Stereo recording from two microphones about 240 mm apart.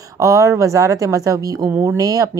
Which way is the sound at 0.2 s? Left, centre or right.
Centre.